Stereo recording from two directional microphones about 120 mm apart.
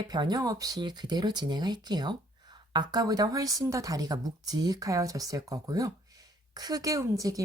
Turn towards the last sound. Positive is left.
turn(degrees=-30)  # may be behind; listen again after turning